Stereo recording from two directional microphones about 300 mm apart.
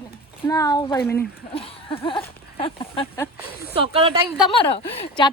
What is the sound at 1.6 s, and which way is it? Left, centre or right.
Speech, centre.